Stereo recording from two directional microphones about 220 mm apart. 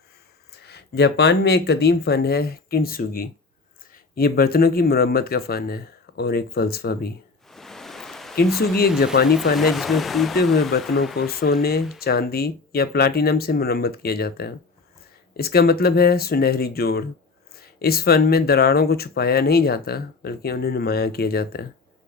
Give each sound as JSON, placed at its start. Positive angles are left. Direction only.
{"t": 0.6, "sound": "speech", "side_deg": 50}
{"t": 7.5, "sound": "a sound", "side_deg": 0}
{"t": 8.5, "sound": "speech", "side_deg": 45}
{"t": 9.6, "sound": "speech", "side_deg": 0}
{"t": 11.2, "sound": "speech", "side_deg": 45}